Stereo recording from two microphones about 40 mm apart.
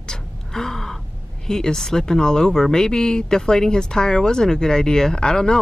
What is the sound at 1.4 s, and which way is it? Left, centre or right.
Speech, centre.